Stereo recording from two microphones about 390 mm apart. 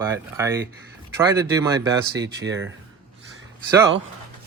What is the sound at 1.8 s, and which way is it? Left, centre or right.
Speech, right.